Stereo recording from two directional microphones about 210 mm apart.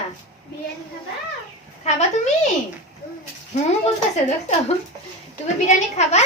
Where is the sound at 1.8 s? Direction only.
30° left (ahead or behind).